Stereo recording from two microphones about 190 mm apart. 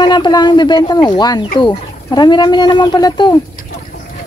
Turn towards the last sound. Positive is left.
turn(degrees=20)  # may be behind; listen again after turning